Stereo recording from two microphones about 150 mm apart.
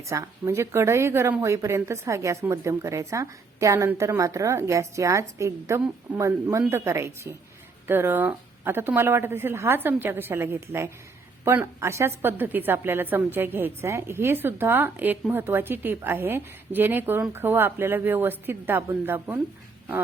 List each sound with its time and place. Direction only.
0.0 s a woman's voice: 20° right (ahead or behind)